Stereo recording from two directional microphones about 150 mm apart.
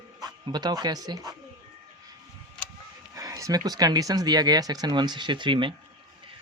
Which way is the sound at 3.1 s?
25° right (ahead or behind).